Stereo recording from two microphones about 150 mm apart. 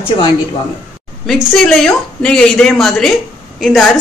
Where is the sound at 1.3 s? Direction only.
Centre (ahead or behind).